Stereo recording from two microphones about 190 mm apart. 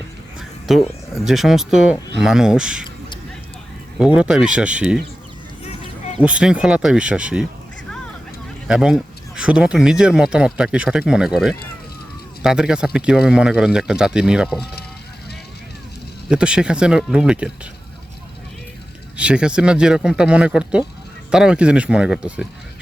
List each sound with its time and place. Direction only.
0.7 s speech: centre (ahead or behind)
3.9 s speech: 5° right (ahead or behind)
6.1 s speech: 5° right (ahead or behind)
8.6 s speech: 5° right (ahead or behind)
16.3 s speech: 5° right (ahead or behind)
19.1 s speech: 5° right (ahead or behind)